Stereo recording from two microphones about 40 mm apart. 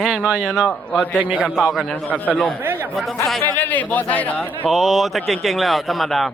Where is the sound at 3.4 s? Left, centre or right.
Left.